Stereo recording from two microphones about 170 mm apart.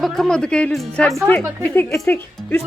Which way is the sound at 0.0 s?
Centre (ahead or behind).